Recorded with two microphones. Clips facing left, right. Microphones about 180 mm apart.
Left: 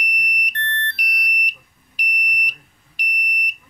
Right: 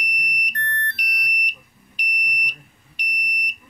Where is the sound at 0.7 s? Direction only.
30° left (ahead or behind).